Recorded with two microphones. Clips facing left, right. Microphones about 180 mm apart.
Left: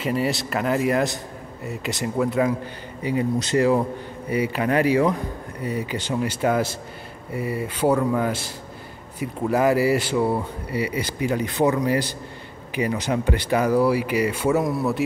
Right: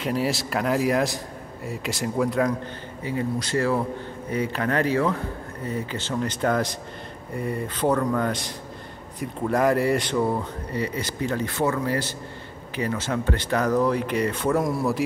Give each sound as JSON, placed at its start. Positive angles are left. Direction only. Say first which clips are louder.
{"t": 0.0, "sound": "a man's voice", "louder": "left 1 dB", "side_deg": 0}
{"t": 3.0, "sound": "speech", "louder": "left 4 dB", "side_deg": 15}